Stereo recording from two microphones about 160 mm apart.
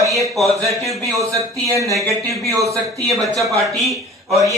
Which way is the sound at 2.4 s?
20° right (ahead or behind).